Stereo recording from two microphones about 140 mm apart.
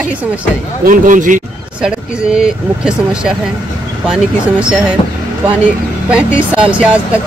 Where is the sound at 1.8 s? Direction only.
5° right (ahead or behind).